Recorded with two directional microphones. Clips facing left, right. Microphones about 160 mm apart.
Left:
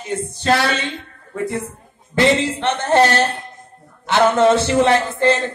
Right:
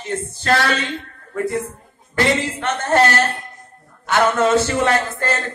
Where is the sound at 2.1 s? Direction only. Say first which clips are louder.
Left 3 dB; 25° left (ahead or behind).